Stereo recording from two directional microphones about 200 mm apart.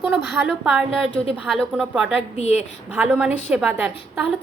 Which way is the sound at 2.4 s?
35° left (ahead or behind).